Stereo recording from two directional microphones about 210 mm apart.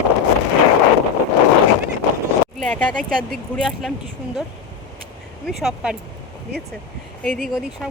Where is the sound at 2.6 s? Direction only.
5° left (ahead or behind).